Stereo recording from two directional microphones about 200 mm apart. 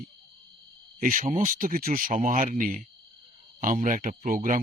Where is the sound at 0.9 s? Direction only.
45° right (ahead or behind).